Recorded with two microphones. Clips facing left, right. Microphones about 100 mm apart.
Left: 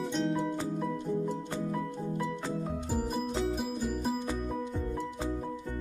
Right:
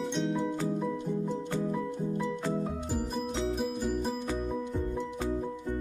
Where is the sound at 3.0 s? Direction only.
Centre (ahead or behind).